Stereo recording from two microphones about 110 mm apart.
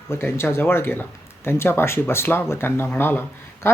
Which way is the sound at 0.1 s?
20° left (ahead or behind).